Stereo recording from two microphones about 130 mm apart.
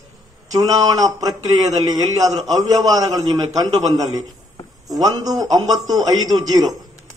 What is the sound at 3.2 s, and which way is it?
A man's voice, 30° right (ahead or behind).